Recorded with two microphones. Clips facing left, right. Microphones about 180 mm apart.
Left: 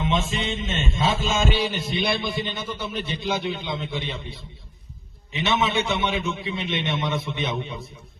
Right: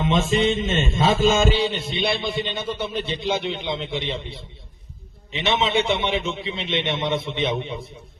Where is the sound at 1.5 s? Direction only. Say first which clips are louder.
Right 2 dB; 25° right (ahead or behind).